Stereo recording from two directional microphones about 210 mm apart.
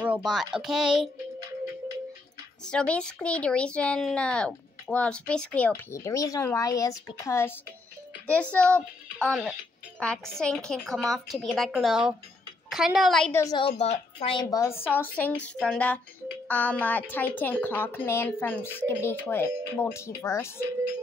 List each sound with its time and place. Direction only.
0.0 s a woman's voice: 5° right (ahead or behind)
2.6 s a woman's voice: 5° left (ahead or behind)
13.4 s a woman's voice: 20° left (ahead or behind)